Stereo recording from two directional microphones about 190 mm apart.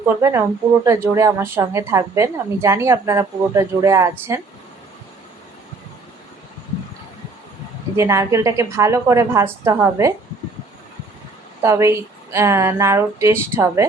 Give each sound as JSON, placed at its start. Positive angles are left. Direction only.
{"t": 0.2, "sound": "a woman's voice", "side_deg": -15}
{"t": 7.9, "sound": "a woman's voice", "side_deg": -15}
{"t": 11.6, "sound": "a woman's voice", "side_deg": -15}